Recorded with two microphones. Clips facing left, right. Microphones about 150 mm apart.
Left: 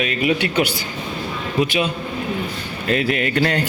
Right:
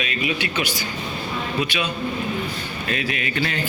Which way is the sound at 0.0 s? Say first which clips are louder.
Left 6 dB; 55° left (ahead or behind).